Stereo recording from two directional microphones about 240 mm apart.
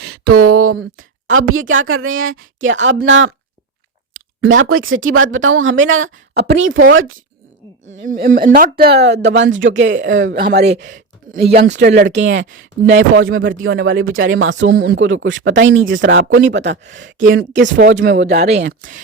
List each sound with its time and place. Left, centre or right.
0.3 s speech: right
8.0 s speech: right
11.3 s speech: right
11.5 s speech: right
17.7 s speech: right
18.7 s speech: right